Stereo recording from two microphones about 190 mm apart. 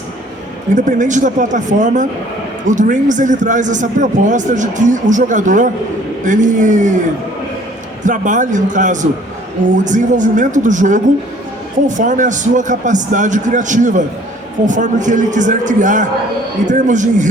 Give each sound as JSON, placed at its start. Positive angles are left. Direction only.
{"t": 0.7, "sound": "a man's voice", "side_deg": -40}
{"t": 8.0, "sound": "a man's voice", "side_deg": -40}